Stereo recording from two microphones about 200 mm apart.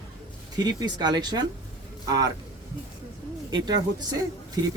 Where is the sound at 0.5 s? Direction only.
20° right (ahead or behind).